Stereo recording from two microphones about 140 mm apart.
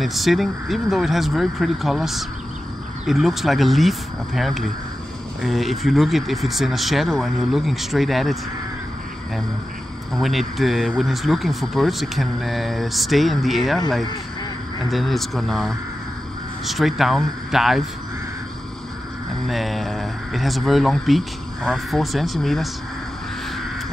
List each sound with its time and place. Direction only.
0.0 s speech: centre (ahead or behind)
10.1 s speech: centre (ahead or behind)
14.9 s speech: centre (ahead or behind)
19.4 s speech: centre (ahead or behind)